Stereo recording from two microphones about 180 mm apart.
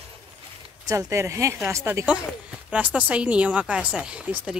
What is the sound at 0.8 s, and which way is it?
Speech, 15° right (ahead or behind).